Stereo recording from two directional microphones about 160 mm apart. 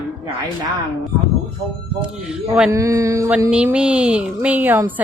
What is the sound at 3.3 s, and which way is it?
A woman's voice, 5° right (ahead or behind).